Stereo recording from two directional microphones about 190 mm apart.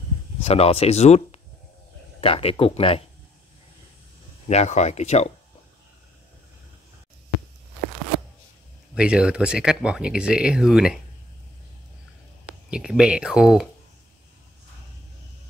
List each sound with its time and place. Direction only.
0.4 s speech: 30° left (ahead or behind)
4.5 s speech: 35° left (ahead or behind)
8.9 s speech: 5° right (ahead or behind)
12.6 s speech: 5° right (ahead or behind)